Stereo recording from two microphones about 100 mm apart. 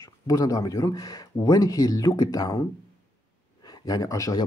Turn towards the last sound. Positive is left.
turn(degrees=35)  # may be behind; listen again after turning